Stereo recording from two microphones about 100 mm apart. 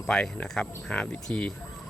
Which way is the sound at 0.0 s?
5° left (ahead or behind).